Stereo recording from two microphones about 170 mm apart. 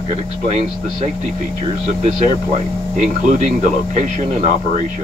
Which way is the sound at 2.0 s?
40° right (ahead or behind).